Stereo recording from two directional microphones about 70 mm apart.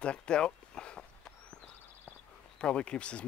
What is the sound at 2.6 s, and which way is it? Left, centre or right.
Speech, centre.